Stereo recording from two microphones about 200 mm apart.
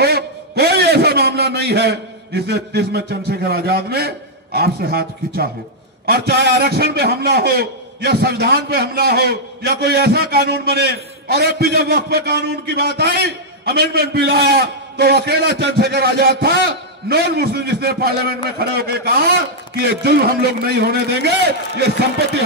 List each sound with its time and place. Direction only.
0.0 s a man's voice: 55° right (ahead or behind)